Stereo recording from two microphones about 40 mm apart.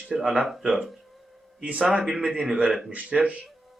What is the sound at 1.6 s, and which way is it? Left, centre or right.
Speech, right.